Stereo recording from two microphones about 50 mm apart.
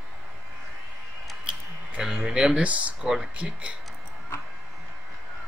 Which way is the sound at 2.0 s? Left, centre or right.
Centre.